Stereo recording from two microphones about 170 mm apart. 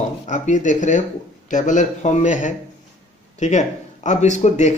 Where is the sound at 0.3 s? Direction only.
45° left (ahead or behind).